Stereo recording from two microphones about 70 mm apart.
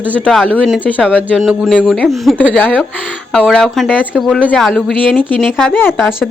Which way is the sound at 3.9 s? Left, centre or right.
Centre.